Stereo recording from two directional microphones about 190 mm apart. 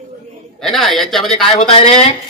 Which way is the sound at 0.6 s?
Centre (ahead or behind).